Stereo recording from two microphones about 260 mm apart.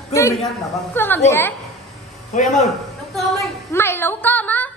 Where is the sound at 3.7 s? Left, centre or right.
Centre.